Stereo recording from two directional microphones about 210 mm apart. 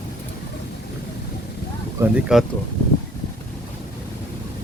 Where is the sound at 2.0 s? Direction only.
5° right (ahead or behind).